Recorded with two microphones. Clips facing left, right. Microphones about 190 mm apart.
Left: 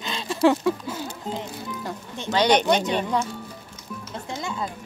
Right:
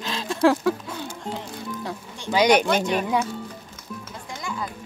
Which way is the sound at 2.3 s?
10° right (ahead or behind).